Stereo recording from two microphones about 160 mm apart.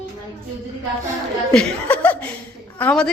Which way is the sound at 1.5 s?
5° left (ahead or behind).